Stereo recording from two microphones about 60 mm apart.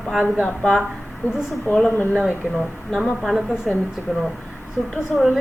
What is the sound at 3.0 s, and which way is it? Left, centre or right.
Speech, centre.